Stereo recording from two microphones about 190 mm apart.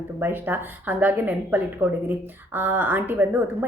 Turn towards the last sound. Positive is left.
turn(degrees=-10)  # may be behind; listen again after turning